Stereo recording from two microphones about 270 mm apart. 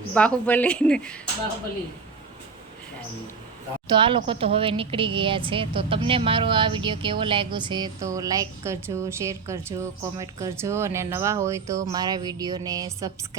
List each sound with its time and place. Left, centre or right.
0.1 s speech: centre
3.8 s a woman's voice: centre